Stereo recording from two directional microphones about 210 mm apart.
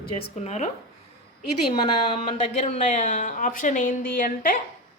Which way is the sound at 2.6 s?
30° left (ahead or behind).